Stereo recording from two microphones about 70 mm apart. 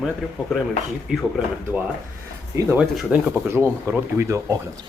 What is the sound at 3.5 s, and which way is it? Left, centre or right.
Speech, right.